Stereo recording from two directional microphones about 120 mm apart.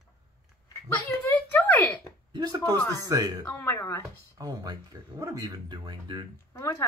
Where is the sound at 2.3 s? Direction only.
35° right (ahead or behind).